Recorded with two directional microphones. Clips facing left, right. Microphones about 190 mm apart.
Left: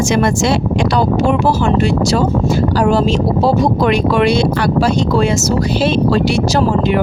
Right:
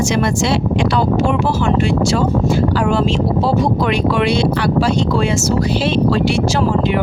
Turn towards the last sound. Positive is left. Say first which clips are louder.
# left 2 dB
turn(degrees=40)  # may be behind; listen again after turning